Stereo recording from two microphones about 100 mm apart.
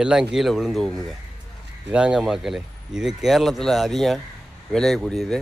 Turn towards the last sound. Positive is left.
turn(degrees=5)  # may be behind; listen again after turning